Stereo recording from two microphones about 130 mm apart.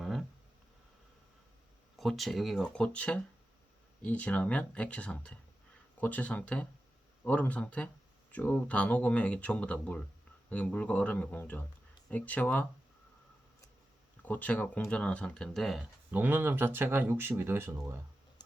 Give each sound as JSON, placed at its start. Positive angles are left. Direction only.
{"t": 0.0, "sound": "a sound", "side_deg": 0}
{"t": 2.0, "sound": "speech", "side_deg": 0}
{"t": 14.2, "sound": "speech", "side_deg": 10}
{"t": 16.1, "sound": "speech", "side_deg": -15}